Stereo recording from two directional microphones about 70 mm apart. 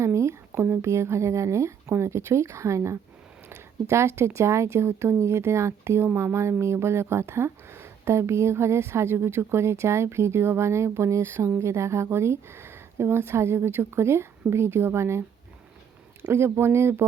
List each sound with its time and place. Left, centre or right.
0.0 s speech: right
16.3 s speech: right